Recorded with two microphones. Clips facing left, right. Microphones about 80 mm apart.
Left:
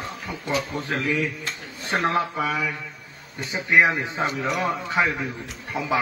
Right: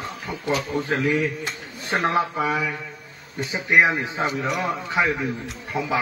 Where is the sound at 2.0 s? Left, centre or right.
Centre.